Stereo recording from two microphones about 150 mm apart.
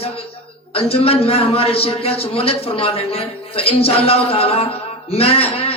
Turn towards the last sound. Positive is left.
turn(degrees=40)  # may be behind; listen again after turning